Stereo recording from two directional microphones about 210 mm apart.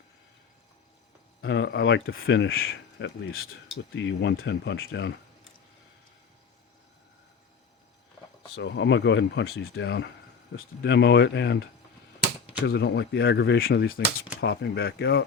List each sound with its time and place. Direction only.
1.4 s speech: 60° left (ahead or behind)
2.0 s speech: 70° left (ahead or behind)
3.9 s speech: 60° left (ahead or behind)
8.5 s speech: 55° left (ahead or behind)
12.6 s speech: 50° left (ahead or behind)